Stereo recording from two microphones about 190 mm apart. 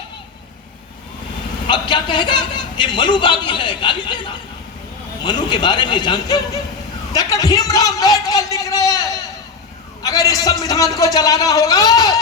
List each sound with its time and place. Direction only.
1.6 s a man's voice: 25° left (ahead or behind)